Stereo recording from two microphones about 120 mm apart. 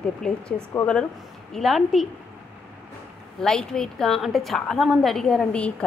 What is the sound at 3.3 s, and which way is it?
A woman's voice, 5° left (ahead or behind).